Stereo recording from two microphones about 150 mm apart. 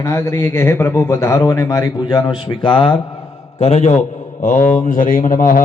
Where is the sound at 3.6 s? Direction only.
50° left (ahead or behind).